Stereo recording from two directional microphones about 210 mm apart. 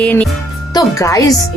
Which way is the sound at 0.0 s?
5° left (ahead or behind).